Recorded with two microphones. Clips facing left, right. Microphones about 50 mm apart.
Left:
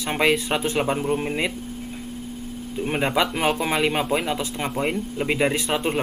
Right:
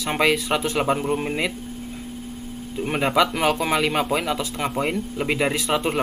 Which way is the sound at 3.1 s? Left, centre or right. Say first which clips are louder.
Right 4 dB; centre.